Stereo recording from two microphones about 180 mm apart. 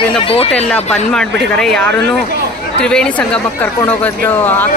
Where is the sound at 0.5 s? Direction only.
5° left (ahead or behind).